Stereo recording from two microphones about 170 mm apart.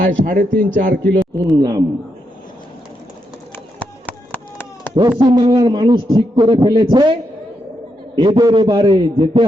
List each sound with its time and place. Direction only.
0.0 s a man's voice: 55° right (ahead or behind)
1.2 s a man's voice: 25° right (ahead or behind)
3.8 s a sound: 10° left (ahead or behind)
4.9 s a man's voice: 25° right (ahead or behind)